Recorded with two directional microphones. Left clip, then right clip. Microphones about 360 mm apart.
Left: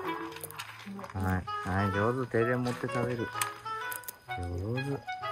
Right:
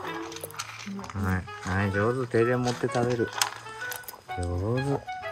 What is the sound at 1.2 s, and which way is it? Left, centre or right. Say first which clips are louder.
Speech: even; centre.